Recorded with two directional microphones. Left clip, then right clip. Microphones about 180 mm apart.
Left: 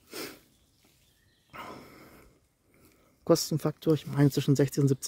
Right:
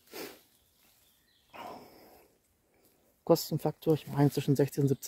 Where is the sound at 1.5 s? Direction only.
20° left (ahead or behind).